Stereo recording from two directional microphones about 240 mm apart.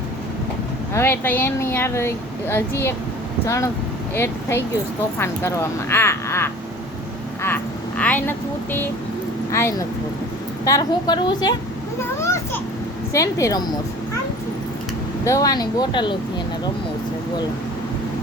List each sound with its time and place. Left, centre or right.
0.9 s speech: centre
13.1 s speech: centre
15.2 s speech: centre